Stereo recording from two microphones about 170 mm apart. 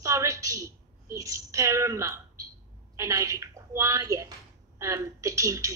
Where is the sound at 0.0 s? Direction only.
20° right (ahead or behind).